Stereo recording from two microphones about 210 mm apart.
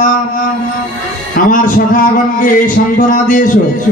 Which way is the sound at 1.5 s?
40° left (ahead or behind).